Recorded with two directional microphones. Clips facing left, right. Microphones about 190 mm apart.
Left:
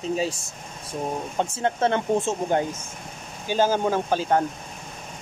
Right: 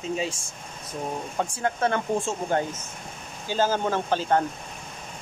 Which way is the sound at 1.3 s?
25° left (ahead or behind).